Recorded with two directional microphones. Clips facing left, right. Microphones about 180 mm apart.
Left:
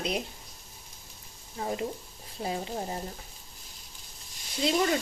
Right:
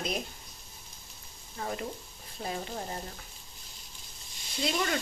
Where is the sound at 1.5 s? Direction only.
25° left (ahead or behind).